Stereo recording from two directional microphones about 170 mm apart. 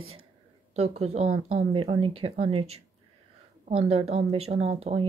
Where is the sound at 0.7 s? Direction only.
40° right (ahead or behind).